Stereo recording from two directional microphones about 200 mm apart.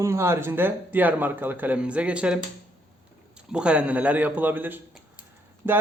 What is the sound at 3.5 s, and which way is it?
Speech, 5° right (ahead or behind).